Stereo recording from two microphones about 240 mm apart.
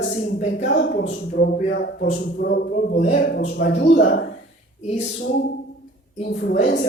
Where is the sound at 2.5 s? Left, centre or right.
Left.